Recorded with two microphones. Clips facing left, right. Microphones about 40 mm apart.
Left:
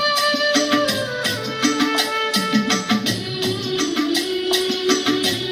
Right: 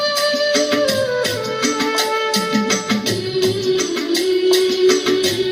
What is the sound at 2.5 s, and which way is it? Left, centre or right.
Music, left.